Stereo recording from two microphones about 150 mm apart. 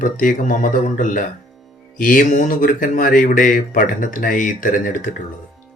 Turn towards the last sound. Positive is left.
turn(degrees=65)  # may be behind; listen again after turning